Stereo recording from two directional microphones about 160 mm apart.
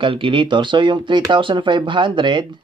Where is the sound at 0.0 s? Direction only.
30° right (ahead or behind).